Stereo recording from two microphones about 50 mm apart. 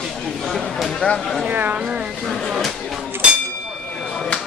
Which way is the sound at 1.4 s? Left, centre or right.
Right.